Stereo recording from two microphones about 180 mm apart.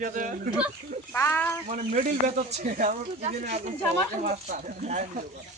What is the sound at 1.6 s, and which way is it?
Speech, 45° right (ahead or behind).